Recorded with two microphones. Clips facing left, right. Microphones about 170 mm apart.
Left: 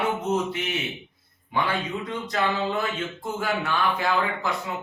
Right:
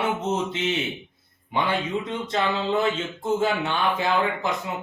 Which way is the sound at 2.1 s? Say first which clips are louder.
Left 1 dB; 25° right (ahead or behind).